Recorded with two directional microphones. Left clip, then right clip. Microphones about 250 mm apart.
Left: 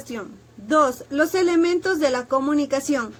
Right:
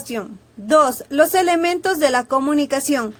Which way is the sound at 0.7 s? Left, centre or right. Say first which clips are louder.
Right 4 dB; right.